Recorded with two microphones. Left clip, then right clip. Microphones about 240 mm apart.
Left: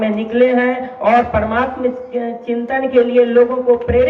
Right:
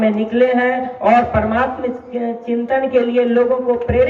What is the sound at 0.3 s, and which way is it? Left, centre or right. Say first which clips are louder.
A man's voice: left 2 dB; left.